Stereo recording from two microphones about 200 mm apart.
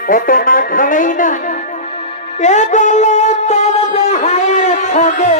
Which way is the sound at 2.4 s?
35° left (ahead or behind).